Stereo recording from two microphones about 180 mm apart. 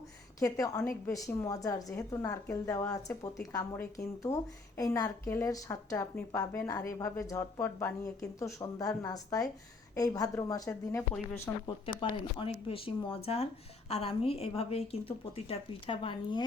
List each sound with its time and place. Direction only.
0.3 s a woman's voice: 20° left (ahead or behind)
11.9 s a woman's voice: 25° left (ahead or behind)